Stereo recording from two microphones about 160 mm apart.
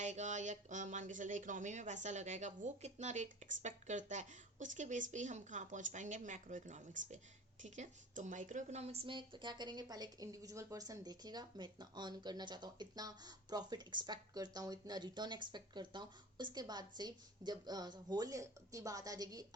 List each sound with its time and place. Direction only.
0.0 s a woman's voice: 50° right (ahead or behind); by 19.5 s 25° right (ahead or behind)